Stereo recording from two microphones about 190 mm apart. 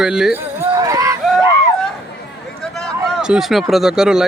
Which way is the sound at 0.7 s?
20° right (ahead or behind).